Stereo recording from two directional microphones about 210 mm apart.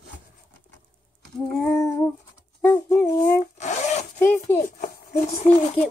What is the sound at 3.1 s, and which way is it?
Rub, 40° left (ahead or behind).